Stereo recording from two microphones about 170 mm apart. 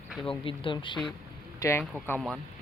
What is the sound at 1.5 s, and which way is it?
Speech, 15° left (ahead or behind).